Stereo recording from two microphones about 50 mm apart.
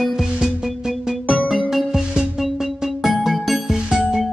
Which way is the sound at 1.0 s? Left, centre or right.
Centre.